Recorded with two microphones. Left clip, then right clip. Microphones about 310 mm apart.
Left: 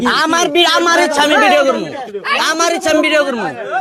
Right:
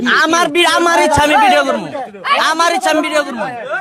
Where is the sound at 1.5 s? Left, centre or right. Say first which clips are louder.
Left 1 dB; centre.